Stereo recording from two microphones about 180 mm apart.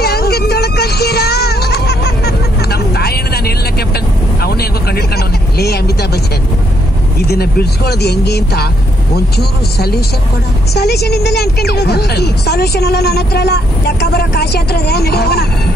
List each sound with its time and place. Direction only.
0.0 s music: 65° left (ahead or behind)
7.2 s a woman's voice: 60° left (ahead or behind)